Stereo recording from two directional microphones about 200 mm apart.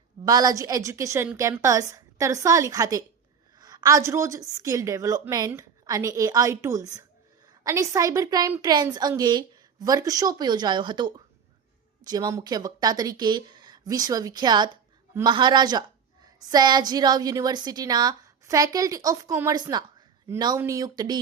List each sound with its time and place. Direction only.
0.3 s a woman's voice: 20° right (ahead or behind)